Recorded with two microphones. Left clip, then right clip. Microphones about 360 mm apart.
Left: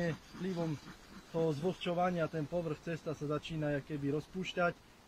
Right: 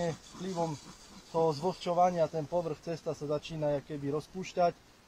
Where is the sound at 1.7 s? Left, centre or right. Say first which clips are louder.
Right 7 dB; centre.